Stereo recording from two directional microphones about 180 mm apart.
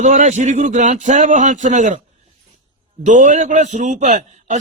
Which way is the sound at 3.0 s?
45° right (ahead or behind).